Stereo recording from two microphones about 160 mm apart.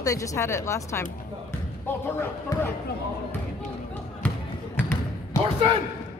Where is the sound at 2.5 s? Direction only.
25° left (ahead or behind).